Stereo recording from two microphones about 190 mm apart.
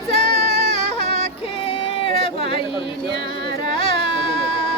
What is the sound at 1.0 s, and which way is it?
Music, 30° left (ahead or behind).